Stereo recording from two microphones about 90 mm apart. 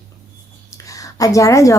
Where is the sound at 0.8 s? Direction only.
40° left (ahead or behind).